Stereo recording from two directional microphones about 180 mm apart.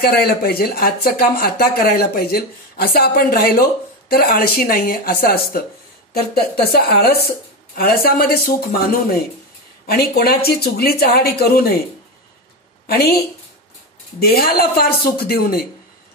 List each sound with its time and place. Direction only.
0.0 s a woman's voice: 60° left (ahead or behind)
9.8 s speech: 55° left (ahead or behind)
12.8 s speech: 60° left (ahead or behind)
14.2 s speech: 60° left (ahead or behind)